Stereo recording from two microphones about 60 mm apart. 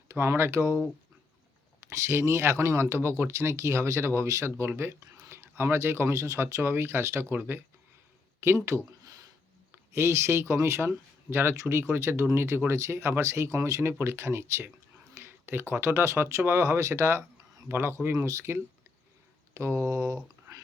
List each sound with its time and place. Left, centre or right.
0.1 s speech: right
1.8 s speech: right
6.6 s speech: right
8.5 s speech: right
9.9 s speech: right
14.0 s speech: right
15.1 s a sound: right
15.7 s speech: right
18.1 s mantra: right
19.5 s mantra: right